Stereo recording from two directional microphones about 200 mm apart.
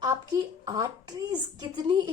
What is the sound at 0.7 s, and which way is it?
A woman's voice, 20° right (ahead or behind).